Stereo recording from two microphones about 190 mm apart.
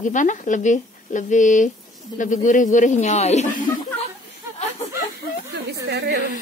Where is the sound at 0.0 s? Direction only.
40° left (ahead or behind).